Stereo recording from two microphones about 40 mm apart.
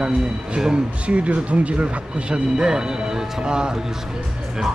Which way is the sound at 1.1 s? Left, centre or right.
Right.